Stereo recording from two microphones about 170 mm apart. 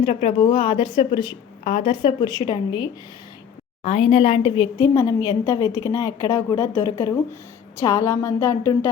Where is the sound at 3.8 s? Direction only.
35° left (ahead or behind).